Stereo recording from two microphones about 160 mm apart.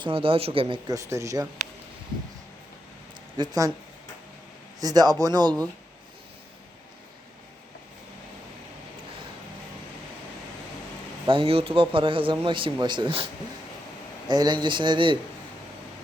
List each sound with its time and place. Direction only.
0.0 s a man's voice: 35° right (ahead or behind)
0.9 s speech: 20° right (ahead or behind)
3.3 s speech: 25° right (ahead or behind)
4.8 s speech: 25° right (ahead or behind)
11.3 s a man's voice: 35° right (ahead or behind)
14.3 s speech: 25° right (ahead or behind)